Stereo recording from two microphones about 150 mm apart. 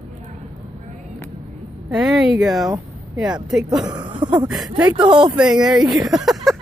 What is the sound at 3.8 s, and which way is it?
Speech, 30° right (ahead or behind).